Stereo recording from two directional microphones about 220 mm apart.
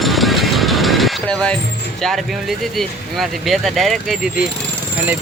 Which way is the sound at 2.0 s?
Centre (ahead or behind).